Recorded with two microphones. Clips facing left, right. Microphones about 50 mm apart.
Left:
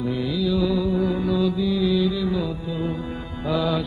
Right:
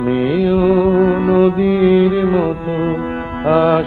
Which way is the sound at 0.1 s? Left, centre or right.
Right.